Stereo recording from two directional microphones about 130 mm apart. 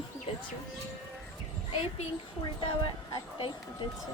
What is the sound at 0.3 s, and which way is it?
Music, 45° left (ahead or behind).